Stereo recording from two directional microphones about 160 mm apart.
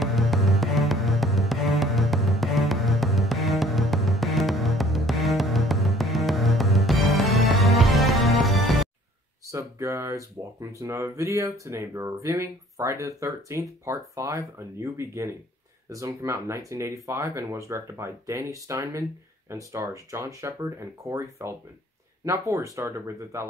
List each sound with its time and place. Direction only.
0.0 s music: centre (ahead or behind)
9.5 s speech: 20° right (ahead or behind)